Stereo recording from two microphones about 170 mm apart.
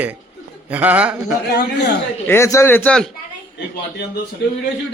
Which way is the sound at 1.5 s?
80° left.